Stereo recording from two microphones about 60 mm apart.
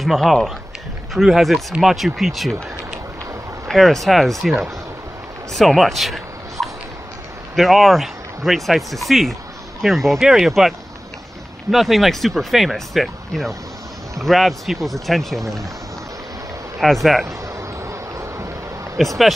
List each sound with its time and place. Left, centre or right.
0.0 s speech: centre
3.6 s speech: centre
11.7 s speech: centre
16.8 s speech: centre
17.6 s vehicle: right
18.9 s speech: centre